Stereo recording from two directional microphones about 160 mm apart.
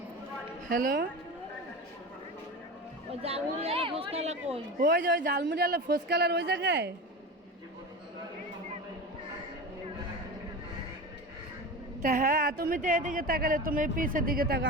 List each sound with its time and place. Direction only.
0.7 s speech: 65° right (ahead or behind)
3.1 s speech: 40° right (ahead or behind)
4.8 s a man's voice: 60° right (ahead or behind); by 6.9 s 90° right
12.0 s speech: 60° right (ahead or behind)
12.8 s speech: 55° right (ahead or behind); by 14.6 s 75° right (ahead or behind)